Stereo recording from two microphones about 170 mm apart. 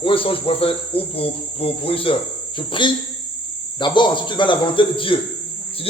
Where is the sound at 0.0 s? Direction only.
30° left (ahead or behind).